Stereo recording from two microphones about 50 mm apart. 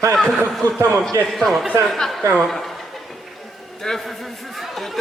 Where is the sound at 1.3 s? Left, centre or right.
Centre.